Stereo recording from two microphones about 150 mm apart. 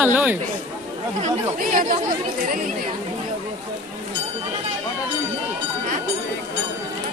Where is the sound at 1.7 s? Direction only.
55° right (ahead or behind).